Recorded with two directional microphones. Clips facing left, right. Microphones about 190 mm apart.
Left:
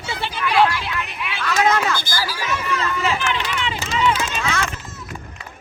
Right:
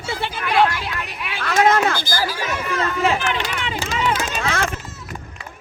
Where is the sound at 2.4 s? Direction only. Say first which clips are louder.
Right 1 dB; 50° right (ahead or behind).